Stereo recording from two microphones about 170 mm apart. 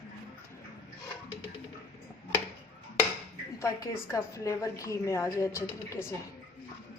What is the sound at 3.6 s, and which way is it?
A woman's voice, 20° left (ahead or behind).